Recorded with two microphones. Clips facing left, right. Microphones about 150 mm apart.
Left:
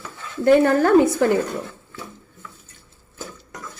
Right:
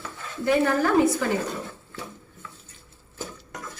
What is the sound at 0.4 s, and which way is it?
Speech, 60° left (ahead or behind).